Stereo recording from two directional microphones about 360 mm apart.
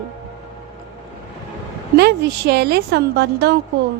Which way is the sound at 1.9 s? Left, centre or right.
Right.